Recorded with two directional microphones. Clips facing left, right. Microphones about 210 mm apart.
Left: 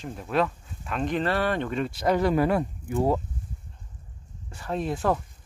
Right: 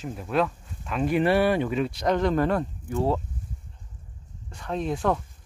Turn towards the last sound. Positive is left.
turn(degrees=5)  # may be behind; listen again after turning